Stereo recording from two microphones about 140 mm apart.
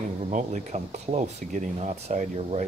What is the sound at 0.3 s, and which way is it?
Speech, 60° right (ahead or behind).